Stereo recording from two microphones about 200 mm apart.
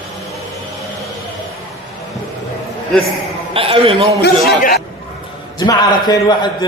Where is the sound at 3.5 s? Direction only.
30° right (ahead or behind).